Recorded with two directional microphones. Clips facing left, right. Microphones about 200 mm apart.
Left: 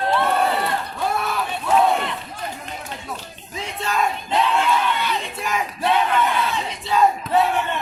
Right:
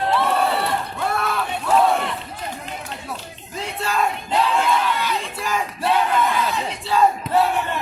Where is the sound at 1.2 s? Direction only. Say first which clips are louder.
Right 1 dB; centre (ahead or behind).